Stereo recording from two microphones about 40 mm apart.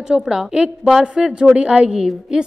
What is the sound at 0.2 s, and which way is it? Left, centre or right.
A woman's voice, centre.